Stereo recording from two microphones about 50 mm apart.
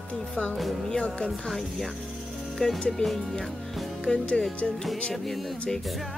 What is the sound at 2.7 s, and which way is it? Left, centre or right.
Speech, centre.